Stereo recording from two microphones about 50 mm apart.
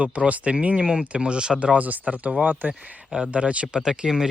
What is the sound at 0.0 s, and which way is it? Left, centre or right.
Speech, right.